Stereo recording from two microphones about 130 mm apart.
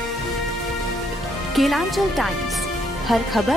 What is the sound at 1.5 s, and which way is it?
Speech, centre (ahead or behind).